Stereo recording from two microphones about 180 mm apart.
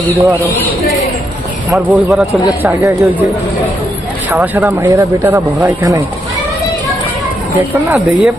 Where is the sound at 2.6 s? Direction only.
15° right (ahead or behind).